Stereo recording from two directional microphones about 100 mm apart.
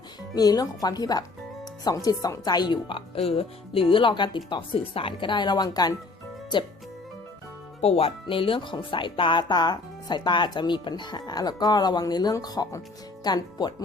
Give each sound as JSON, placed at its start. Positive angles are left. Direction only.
{"t": 0.3, "sound": "speech", "side_deg": 40}
{"t": 3.2, "sound": "speech", "side_deg": 75}
{"t": 7.8, "sound": "speech", "side_deg": 85}